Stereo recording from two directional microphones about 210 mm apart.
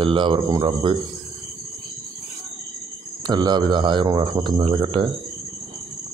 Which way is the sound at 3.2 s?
20° right (ahead or behind).